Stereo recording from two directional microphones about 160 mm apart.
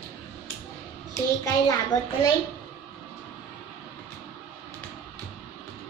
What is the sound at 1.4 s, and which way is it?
Speech, 20° left (ahead or behind).